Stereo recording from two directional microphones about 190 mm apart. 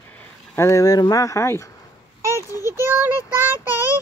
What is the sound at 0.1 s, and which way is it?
Speech, 10° left (ahead or behind).